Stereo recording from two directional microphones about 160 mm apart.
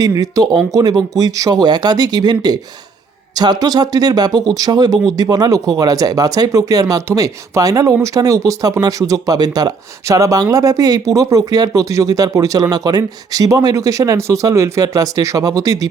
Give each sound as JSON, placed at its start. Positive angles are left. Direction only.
{"t": 0.0, "sound": "speech", "side_deg": -20}